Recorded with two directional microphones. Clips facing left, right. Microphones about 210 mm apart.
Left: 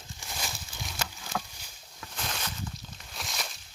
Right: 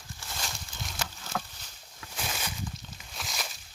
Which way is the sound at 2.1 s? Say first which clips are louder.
Right 1 dB; 5° right (ahead or behind).